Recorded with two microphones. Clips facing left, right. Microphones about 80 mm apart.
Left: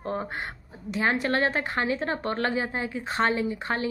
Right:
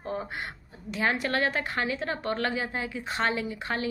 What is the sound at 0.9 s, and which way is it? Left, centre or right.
A woman's voice, left.